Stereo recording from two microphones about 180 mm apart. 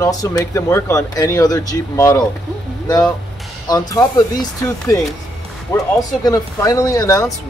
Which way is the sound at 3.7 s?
20° left (ahead or behind).